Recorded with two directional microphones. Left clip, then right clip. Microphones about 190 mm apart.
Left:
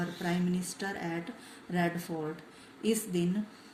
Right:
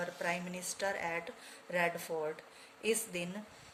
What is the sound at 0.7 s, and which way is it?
Speech, 35° right (ahead or behind).